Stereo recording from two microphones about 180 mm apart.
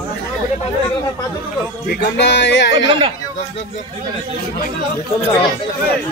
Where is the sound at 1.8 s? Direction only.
70° left (ahead or behind).